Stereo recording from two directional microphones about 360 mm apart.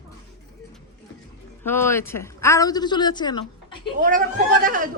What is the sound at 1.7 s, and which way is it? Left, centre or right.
A woman's voice, centre.